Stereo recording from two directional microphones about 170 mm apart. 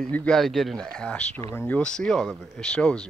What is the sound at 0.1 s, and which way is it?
Speech, 5° left (ahead or behind).